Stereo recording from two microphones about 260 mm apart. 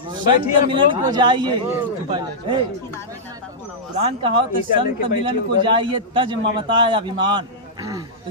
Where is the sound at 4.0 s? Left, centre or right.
Right.